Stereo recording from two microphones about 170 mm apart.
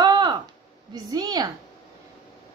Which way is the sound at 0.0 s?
25° right (ahead or behind).